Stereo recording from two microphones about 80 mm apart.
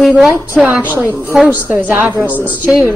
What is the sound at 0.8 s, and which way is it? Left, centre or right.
A woman's voice, right.